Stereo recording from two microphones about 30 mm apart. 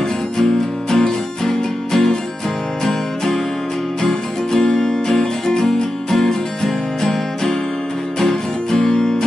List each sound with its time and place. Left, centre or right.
0.4 s music: centre
8.8 s music: centre